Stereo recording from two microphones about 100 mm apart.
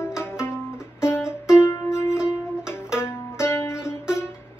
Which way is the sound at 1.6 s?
25° left (ahead or behind).